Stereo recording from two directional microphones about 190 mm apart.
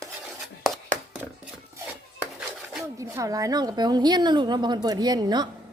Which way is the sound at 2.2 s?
5° right (ahead or behind).